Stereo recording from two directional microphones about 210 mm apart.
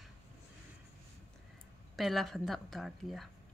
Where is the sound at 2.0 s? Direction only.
Centre (ahead or behind).